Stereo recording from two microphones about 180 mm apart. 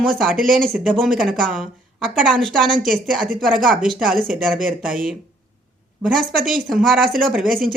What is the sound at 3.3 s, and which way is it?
Speech, 5° left (ahead or behind).